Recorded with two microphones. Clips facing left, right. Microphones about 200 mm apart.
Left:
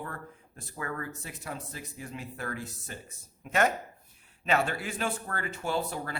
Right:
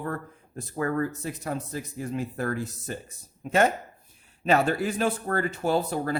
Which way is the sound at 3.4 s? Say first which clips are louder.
Right 5 dB; 30° right (ahead or behind).